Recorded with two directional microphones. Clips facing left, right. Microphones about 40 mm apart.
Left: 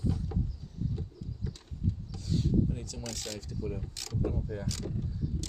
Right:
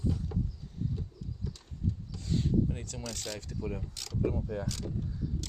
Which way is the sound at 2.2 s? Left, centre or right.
Right.